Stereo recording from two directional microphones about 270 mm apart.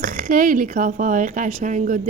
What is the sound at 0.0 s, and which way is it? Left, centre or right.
Speech, right.